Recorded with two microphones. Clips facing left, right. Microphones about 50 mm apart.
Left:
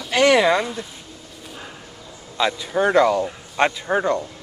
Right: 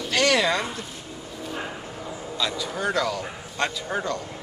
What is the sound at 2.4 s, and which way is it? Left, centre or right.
Speech, left.